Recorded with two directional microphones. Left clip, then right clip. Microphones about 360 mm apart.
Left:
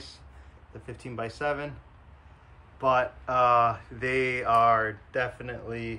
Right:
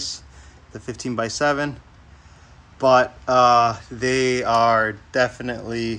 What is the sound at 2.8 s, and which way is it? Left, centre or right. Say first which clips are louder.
Speech: right 9 dB; centre.